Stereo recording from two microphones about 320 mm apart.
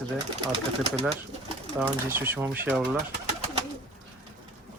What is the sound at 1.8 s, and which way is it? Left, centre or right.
Speech, centre.